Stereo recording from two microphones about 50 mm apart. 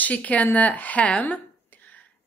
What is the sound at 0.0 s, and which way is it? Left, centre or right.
Speech, left.